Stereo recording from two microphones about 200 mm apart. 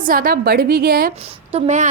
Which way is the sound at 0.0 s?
45° right (ahead or behind).